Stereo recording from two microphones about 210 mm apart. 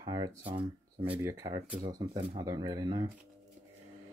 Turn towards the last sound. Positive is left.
turn(degrees=-20)  # may be behind; listen again after turning